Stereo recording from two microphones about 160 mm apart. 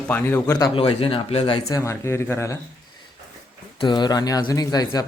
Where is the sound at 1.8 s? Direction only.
15° left (ahead or behind).